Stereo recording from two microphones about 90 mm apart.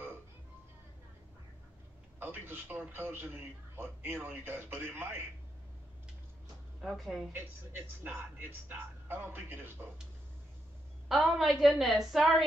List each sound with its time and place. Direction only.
2.1 s a man's voice: 25° right (ahead or behind)
6.8 s a woman's voice: centre (ahead or behind)
7.3 s a man's voice: 25° right (ahead or behind)
11.1 s a woman's voice: centre (ahead or behind)